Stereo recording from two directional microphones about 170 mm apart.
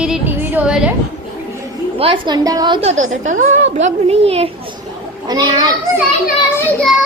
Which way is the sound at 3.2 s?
45° right (ahead or behind).